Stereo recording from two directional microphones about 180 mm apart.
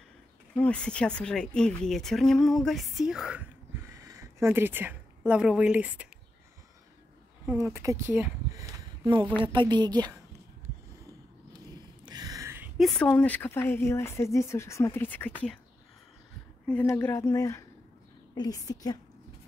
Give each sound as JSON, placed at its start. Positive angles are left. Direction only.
{"t": 0.6, "sound": "speech", "side_deg": 5}
{"t": 3.9, "sound": "a woman's voice", "side_deg": -20}
{"t": 7.4, "sound": "a woman's voice", "side_deg": -15}
{"t": 12.0, "sound": "a sound", "side_deg": -20}
{"t": 12.7, "sound": "speech", "side_deg": 5}
{"t": 16.6, "sound": "a woman's voice", "side_deg": 10}